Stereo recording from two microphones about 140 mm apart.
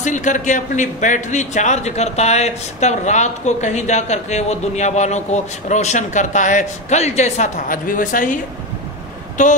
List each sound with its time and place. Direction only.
0.0 s a man's voice: 60° left (ahead or behind)
9.4 s a man's voice: 60° left (ahead or behind)